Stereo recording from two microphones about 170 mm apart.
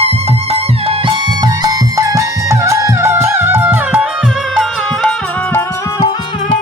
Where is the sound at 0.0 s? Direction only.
40° right (ahead or behind); by 5.6 s 10° left (ahead or behind).